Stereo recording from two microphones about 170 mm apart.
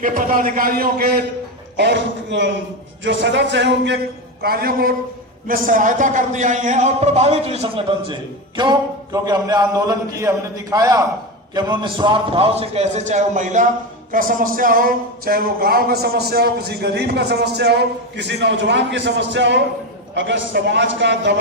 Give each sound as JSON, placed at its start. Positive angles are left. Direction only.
{"t": 0.0, "sound": "a man's voice", "side_deg": -55}
{"t": 1.7, "sound": "a man's voice", "side_deg": -90}
{"t": 4.4, "sound": "a man's voice", "side_deg": -60}